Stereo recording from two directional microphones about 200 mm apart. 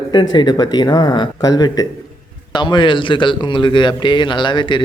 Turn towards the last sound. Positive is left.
turn(degrees=25)  # may be behind; listen again after turning